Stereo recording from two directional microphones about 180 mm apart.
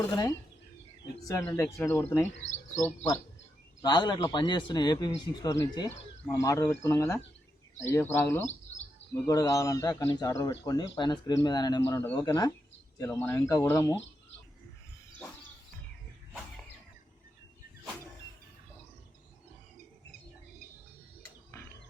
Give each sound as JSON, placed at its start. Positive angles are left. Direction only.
{"t": 1.3, "sound": "speech", "side_deg": 15}
{"t": 2.4, "sound": "speech", "side_deg": 40}
{"t": 2.8, "sound": "speech", "side_deg": 15}
{"t": 3.8, "sound": "a man's voice", "side_deg": 25}
{"t": 8.4, "sound": "bird", "side_deg": 40}
{"t": 9.2, "sound": "a man's voice", "side_deg": 20}